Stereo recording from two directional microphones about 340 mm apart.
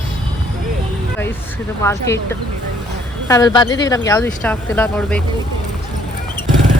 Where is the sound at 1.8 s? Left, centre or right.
Centre.